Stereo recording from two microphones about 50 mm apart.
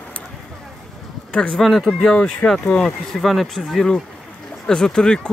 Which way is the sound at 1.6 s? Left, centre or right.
Centre.